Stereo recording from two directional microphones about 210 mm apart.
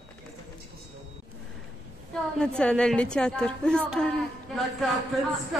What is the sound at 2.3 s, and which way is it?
A woman's voice, 5° left (ahead or behind).